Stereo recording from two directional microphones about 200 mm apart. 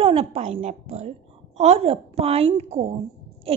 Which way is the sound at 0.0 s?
30° right (ahead or behind).